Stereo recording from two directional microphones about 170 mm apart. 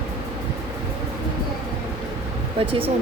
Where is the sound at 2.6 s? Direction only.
35° right (ahead or behind).